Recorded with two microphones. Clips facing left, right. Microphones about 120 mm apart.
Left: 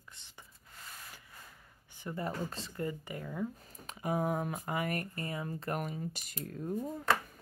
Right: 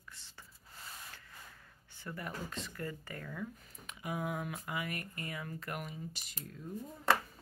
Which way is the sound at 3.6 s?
35° left (ahead or behind).